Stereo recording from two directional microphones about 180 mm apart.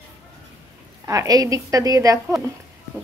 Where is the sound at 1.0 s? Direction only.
20° right (ahead or behind).